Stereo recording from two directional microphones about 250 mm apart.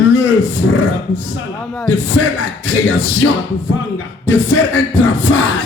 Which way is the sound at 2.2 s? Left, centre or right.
Left.